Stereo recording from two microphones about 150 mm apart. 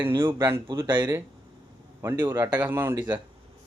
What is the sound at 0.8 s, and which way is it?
Speech, 30° right (ahead or behind).